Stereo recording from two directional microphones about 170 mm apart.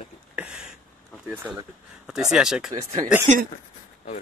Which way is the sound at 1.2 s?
10° right (ahead or behind).